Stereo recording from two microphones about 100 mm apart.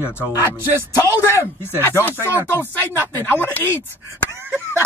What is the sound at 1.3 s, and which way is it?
A woman's voice, 25° left (ahead or behind).